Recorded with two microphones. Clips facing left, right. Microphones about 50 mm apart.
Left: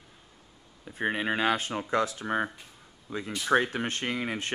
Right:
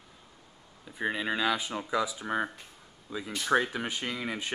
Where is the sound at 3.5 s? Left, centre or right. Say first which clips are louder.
Left 2 dB; centre.